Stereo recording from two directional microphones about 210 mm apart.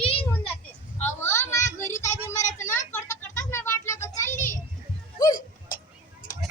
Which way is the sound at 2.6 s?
10° left (ahead or behind).